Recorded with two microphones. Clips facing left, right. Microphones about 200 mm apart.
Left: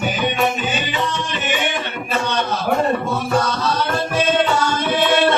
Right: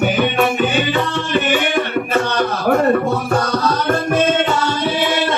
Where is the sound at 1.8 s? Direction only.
60° right (ahead or behind).